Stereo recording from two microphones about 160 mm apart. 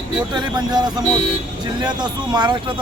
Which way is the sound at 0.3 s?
25° right (ahead or behind).